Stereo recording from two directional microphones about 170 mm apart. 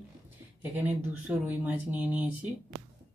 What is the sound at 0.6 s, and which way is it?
Speech, 10° right (ahead or behind).